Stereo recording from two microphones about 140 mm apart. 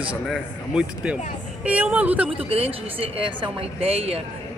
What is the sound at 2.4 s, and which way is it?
A woman's voice, 45° right (ahead or behind).